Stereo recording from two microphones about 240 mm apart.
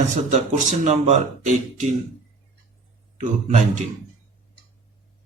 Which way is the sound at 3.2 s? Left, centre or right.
Right.